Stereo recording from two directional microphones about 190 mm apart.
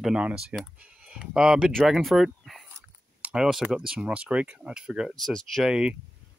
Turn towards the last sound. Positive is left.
turn(degrees=-5)  # may be behind; listen again after turning